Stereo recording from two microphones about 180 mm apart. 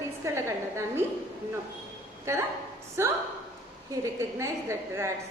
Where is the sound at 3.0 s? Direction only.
15° right (ahead or behind).